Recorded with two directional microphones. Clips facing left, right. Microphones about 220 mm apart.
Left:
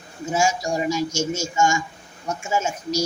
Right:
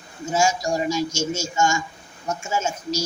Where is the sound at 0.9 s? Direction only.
15° left (ahead or behind).